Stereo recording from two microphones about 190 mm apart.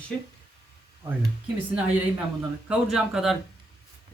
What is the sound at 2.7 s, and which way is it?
Speech, centre (ahead or behind).